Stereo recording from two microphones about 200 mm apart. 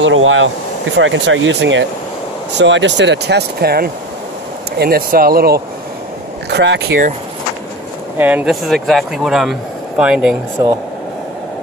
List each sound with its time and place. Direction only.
0.0 s speech: 75° right (ahead or behind); by 5.6 s 50° right (ahead or behind)
6.5 s speech: 60° right (ahead or behind)
8.2 s speech: 10° right (ahead or behind)